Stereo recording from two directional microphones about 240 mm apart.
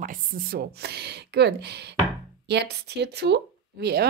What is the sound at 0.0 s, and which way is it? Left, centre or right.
Speech, right.